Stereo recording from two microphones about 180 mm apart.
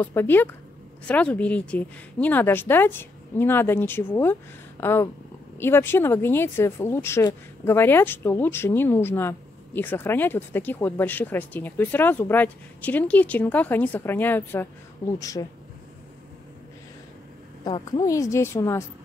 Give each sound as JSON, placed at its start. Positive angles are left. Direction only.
{"t": 0.0, "sound": "speech", "side_deg": 10}
{"t": 17.6, "sound": "speech", "side_deg": 25}